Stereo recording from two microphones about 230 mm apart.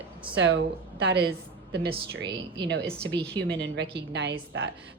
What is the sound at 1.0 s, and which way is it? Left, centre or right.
Speech, right.